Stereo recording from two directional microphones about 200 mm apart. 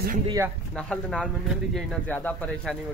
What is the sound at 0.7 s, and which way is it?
Speech, 5° left (ahead or behind).